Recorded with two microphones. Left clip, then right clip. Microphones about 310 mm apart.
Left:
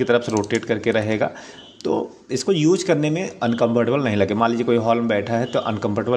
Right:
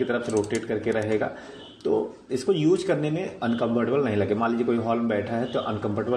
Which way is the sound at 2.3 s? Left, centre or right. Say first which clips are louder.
Left 4 dB; left.